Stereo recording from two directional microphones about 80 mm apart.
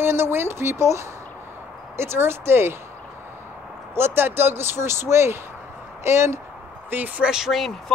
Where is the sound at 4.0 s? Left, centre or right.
Right.